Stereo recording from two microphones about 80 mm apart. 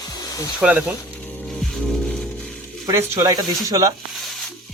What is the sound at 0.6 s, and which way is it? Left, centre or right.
Speech, centre.